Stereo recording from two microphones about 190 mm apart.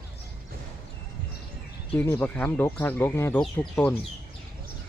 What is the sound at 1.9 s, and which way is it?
Speech, 10° left (ahead or behind).